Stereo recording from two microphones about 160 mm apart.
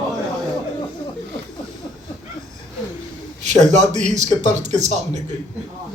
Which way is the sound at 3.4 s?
45° right (ahead or behind).